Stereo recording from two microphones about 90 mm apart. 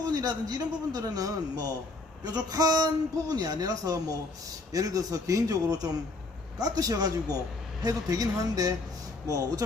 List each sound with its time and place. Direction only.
0.0 s a man's voice: 45° right (ahead or behind)